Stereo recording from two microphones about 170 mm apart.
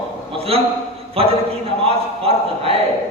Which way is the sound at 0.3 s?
35° right (ahead or behind).